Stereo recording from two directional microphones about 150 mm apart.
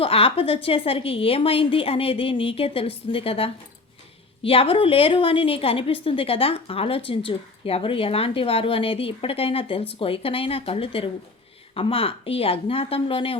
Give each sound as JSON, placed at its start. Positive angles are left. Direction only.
{"t": 0.0, "sound": "a woman's voice", "side_deg": 40}